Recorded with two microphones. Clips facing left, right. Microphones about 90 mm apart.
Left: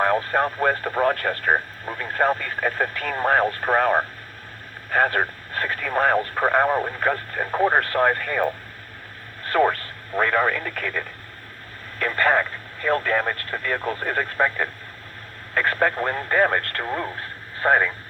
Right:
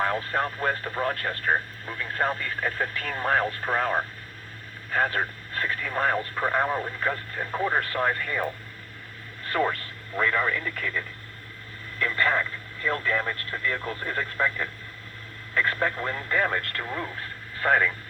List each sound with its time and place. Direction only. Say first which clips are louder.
0.0 s speech: left 6 dB; 40° left (ahead or behind)
9.5 s speech: left 6 dB; 50° left (ahead or behind)